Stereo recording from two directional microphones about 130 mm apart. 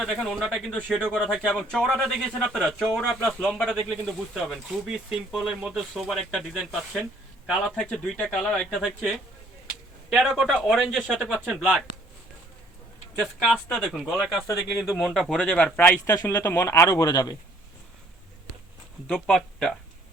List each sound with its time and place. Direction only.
0.0 s speech: 5° right (ahead or behind)
0.7 s speech: 5° left (ahead or behind)
1.2 s a man's voice: 5° right (ahead or behind)
13.1 s speech: centre (ahead or behind)
16.1 s speech: 25° left (ahead or behind)
19.1 s speech: 5° left (ahead or behind)